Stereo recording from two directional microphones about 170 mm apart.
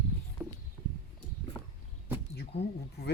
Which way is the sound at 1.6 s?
10° left (ahead or behind).